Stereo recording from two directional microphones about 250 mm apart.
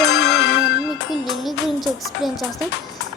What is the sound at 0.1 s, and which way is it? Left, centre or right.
Music, left.